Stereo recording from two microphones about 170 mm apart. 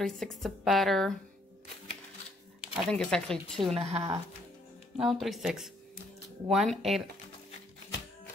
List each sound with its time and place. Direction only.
0.0 s speech: centre (ahead or behind)
2.6 s speech: centre (ahead or behind)
3.7 s speech: 35° right (ahead or behind)
5.0 s speech: centre (ahead or behind)